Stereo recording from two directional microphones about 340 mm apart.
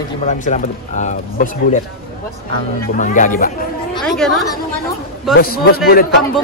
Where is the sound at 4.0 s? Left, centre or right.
Centre.